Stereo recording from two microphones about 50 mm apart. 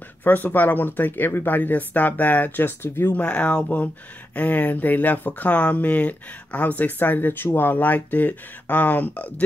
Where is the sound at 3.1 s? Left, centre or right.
Left.